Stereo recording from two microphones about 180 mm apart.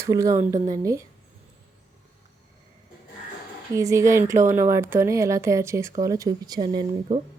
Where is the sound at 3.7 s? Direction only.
15° right (ahead or behind).